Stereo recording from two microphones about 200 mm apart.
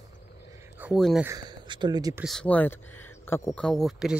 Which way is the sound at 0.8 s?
5° right (ahead or behind).